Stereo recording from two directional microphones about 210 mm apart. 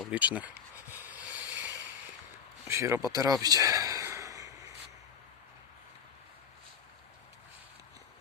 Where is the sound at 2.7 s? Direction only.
15° right (ahead or behind).